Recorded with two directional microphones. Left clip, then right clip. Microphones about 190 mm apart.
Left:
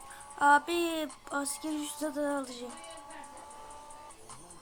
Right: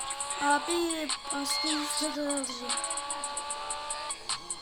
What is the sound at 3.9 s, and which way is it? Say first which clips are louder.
Music: right 14 dB; 45° right (ahead or behind).